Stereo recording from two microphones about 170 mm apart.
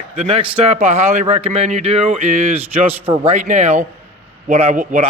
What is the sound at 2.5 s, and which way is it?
Speech, 10° right (ahead or behind).